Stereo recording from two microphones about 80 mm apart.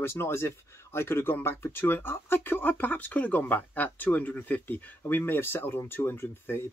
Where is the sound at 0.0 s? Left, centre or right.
Left.